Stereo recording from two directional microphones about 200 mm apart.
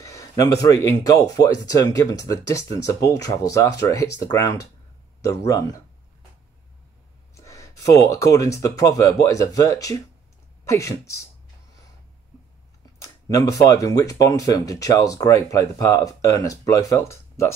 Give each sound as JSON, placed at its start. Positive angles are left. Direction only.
{"t": 0.0, "sound": "speech", "side_deg": 15}
{"t": 7.3, "sound": "speech", "side_deg": 15}
{"t": 13.0, "sound": "speech", "side_deg": 15}